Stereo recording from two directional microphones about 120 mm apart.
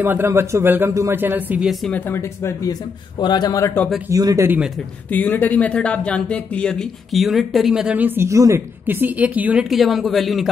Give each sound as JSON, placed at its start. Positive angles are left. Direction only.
{"t": 0.0, "sound": "a man's voice", "side_deg": -20}
{"t": 1.6, "sound": "speech", "side_deg": 0}
{"t": 1.9, "sound": "speech", "side_deg": 15}
{"t": 4.1, "sound": "a man's voice", "side_deg": -30}
{"t": 4.5, "sound": "a man's voice", "side_deg": -10}
{"t": 5.1, "sound": "speech", "side_deg": 15}
{"t": 9.7, "sound": "speech", "side_deg": 0}